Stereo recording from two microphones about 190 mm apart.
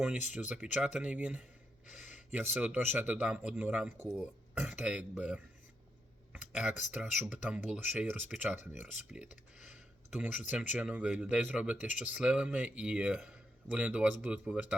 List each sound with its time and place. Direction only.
0.3 s speech: 5° right (ahead or behind)
6.3 s a sound: centre (ahead or behind)
6.9 s speech: 5° right (ahead or behind)